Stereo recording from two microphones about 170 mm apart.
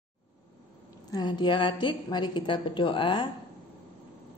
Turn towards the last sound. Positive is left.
turn(degrees=30)  # may be behind; listen again after turning